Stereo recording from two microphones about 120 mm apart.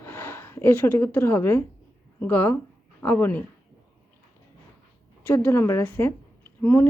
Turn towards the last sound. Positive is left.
turn(degrees=15)  # may be behind; listen again after turning